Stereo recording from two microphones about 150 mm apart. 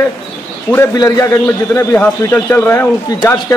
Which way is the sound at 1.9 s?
10° left (ahead or behind).